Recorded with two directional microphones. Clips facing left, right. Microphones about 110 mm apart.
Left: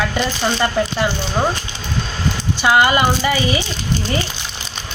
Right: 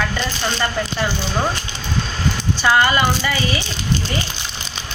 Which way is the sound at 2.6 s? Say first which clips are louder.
Left 2 dB; 15° left (ahead or behind).